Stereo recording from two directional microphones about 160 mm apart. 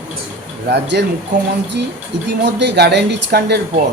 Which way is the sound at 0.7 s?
90° right.